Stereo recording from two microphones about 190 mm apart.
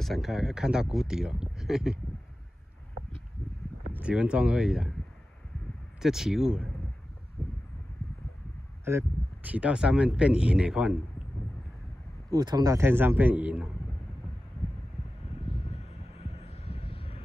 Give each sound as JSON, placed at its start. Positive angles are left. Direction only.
{"t": 0.0, "sound": "speech", "side_deg": 0}
{"t": 3.9, "sound": "speech", "side_deg": -5}
{"t": 5.9, "sound": "speech", "side_deg": 0}
{"t": 8.8, "sound": "speech", "side_deg": -10}
{"t": 12.3, "sound": "a man's voice", "side_deg": -20}
{"t": 15.4, "sound": "vehicle", "side_deg": 30}